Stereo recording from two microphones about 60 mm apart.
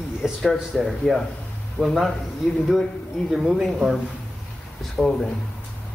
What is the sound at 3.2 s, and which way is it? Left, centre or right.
Speech, centre.